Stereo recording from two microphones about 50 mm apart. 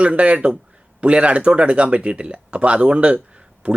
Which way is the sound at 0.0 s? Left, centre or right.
Right.